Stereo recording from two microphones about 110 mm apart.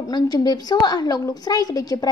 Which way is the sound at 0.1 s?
35° left (ahead or behind).